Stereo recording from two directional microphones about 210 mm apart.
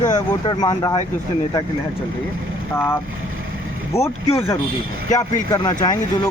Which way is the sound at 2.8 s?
10° left (ahead or behind).